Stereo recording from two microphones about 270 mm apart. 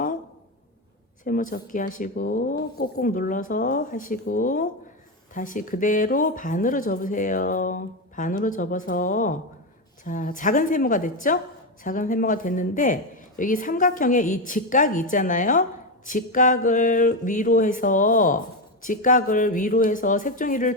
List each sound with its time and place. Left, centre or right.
1.2 s speech: left